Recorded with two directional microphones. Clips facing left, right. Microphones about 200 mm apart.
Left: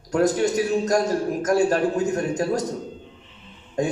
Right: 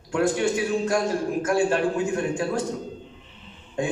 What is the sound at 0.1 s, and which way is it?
A man's voice, 40° left (ahead or behind).